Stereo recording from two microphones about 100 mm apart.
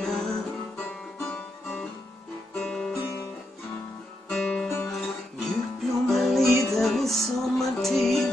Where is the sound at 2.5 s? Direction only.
5° left (ahead or behind).